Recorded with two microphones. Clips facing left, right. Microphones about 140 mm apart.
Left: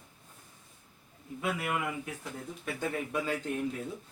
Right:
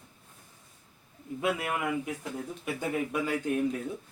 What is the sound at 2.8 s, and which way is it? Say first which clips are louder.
Speech: right 2 dB; 10° right (ahead or behind).